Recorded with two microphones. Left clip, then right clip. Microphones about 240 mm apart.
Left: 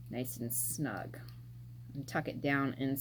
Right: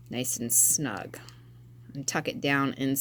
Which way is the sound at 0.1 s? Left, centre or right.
Right.